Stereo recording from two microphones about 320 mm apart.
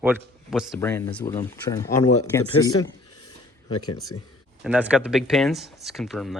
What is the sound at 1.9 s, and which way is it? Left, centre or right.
Speech, left.